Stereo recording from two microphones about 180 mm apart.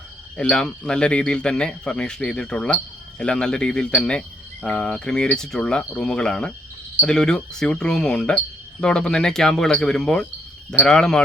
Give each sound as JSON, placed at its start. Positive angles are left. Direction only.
{"t": 0.3, "sound": "speech", "side_deg": 5}